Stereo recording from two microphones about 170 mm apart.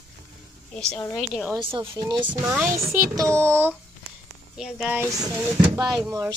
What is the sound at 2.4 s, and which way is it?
Speech, 15° right (ahead or behind).